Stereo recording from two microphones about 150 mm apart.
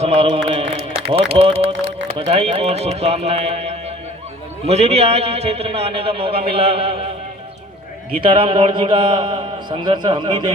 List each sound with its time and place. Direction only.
0.0 s a sound: 45° right (ahead or behind)
0.4 s a man's voice: 35° right (ahead or behind)
8.2 s a man's voice: 35° right (ahead or behind)